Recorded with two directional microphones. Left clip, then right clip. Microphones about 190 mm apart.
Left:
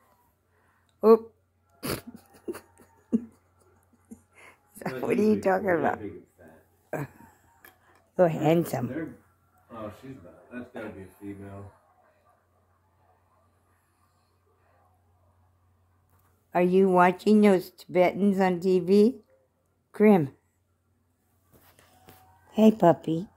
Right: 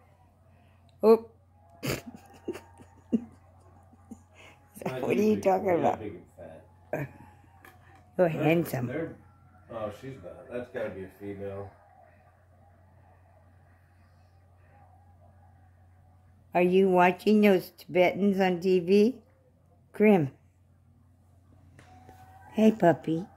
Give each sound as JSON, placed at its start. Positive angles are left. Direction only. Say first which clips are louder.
{"t": 1.8, "sound": "a sound", "louder": "even", "side_deg": 0}
{"t": 8.2, "sound": "speech", "louder": "left 2 dB", "side_deg": 15}
{"t": 16.5, "sound": "speech", "louder": "left 1 dB", "side_deg": 10}
{"t": 22.5, "sound": "speech", "louder": "left 3 dB", "side_deg": 15}